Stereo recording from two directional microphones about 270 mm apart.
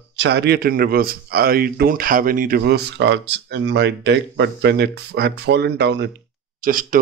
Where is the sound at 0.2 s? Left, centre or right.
Right.